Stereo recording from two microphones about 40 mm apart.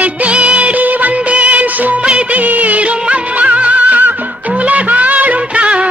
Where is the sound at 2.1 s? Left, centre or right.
Right.